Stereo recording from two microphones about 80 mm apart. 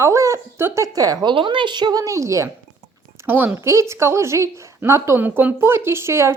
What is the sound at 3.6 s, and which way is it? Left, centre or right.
Speech, right.